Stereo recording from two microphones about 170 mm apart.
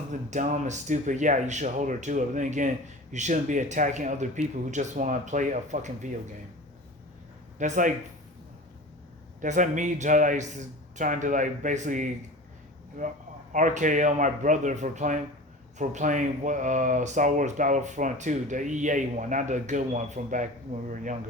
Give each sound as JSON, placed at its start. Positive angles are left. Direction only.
{"t": 0.1, "sound": "speech", "side_deg": -45}
{"t": 7.6, "sound": "speech", "side_deg": -50}
{"t": 9.4, "sound": "speech", "side_deg": -50}
{"t": 13.5, "sound": "speech", "side_deg": -50}